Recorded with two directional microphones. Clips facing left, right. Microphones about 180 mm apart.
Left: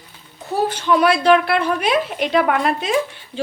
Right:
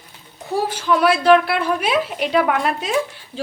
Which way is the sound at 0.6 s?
5° right (ahead or behind).